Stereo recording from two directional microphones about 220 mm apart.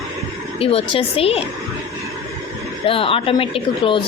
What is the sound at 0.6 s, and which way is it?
Speech, 25° left (ahead or behind).